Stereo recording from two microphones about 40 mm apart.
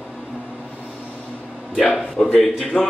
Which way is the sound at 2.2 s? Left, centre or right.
Centre.